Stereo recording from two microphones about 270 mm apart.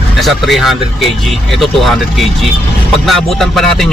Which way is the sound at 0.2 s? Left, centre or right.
Centre.